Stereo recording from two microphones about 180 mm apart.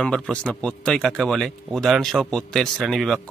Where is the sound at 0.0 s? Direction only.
5° left (ahead or behind).